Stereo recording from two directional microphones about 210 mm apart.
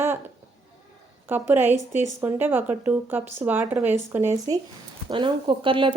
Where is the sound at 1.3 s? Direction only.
10° right (ahead or behind).